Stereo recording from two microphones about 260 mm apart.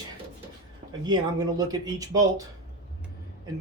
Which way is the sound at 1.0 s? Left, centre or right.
Centre.